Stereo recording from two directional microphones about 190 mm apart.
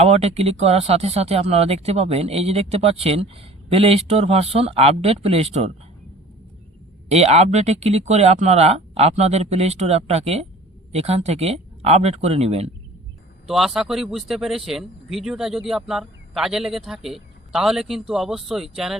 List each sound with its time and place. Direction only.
0.0 s speech: 35° right (ahead or behind)
7.1 s speech: 35° right (ahead or behind)
13.5 s speech: centre (ahead or behind)